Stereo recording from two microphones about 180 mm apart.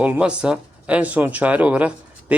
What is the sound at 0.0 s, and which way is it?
Speech, 5° right (ahead or behind).